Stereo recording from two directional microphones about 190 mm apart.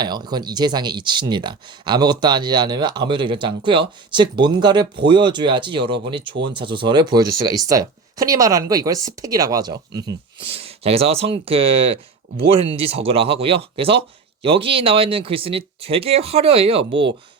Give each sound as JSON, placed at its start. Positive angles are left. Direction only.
{"t": 0.0, "sound": "speech", "side_deg": -20}